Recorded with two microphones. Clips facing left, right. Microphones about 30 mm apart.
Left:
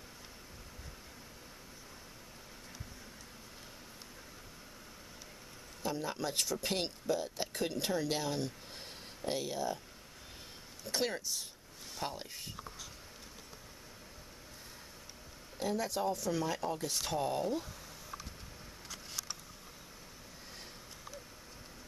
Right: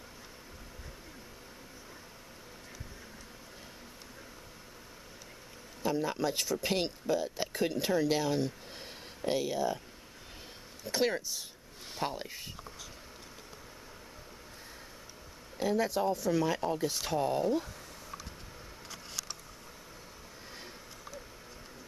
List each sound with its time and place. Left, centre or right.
5.8 s speech: centre
10.8 s speech: centre
11.9 s speech: centre
15.5 s speech: centre